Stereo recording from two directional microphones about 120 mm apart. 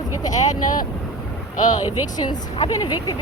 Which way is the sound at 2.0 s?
35° left (ahead or behind).